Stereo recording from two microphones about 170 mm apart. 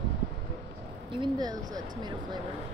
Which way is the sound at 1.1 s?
25° right (ahead or behind).